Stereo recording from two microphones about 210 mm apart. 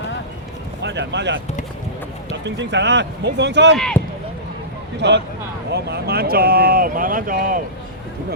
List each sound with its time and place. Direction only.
0.8 s speech: 55° right (ahead or behind)
2.4 s speech: 55° right (ahead or behind)
3.8 s speech: 5° left (ahead or behind)
4.9 s speech: 55° right (ahead or behind)